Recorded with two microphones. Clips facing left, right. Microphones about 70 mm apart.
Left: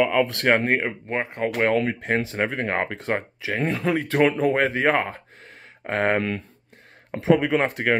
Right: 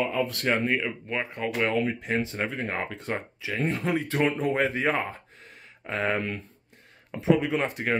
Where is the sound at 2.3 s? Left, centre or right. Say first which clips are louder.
Left 5 dB; left.